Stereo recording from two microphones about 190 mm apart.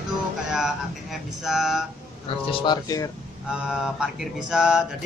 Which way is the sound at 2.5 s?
25° left (ahead or behind).